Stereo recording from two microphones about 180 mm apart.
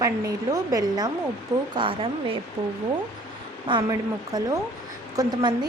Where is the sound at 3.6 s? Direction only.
25° right (ahead or behind).